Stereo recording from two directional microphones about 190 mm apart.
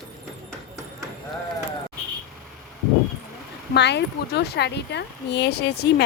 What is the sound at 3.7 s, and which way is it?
Speech, 65° left (ahead or behind).